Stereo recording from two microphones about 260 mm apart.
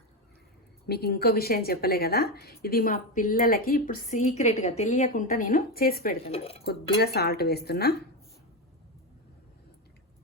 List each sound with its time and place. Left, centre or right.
0.9 s a woman's voice: left
6.2 s speech: left
7.0 s a woman's voice: left